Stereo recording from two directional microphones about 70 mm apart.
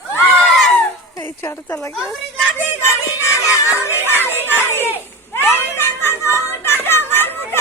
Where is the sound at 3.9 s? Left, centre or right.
Right.